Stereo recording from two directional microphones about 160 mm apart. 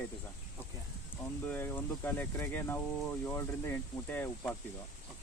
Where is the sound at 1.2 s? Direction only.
15° left (ahead or behind).